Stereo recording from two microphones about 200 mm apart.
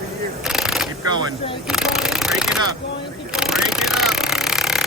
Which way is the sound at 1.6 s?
Centre (ahead or behind).